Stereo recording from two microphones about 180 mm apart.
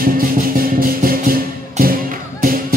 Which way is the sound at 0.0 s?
50° right (ahead or behind).